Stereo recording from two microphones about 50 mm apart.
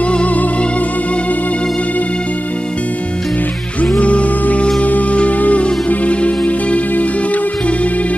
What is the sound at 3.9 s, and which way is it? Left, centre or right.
Music, left.